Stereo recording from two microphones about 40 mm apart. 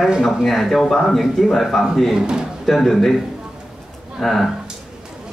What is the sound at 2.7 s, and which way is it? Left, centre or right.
Speech, centre.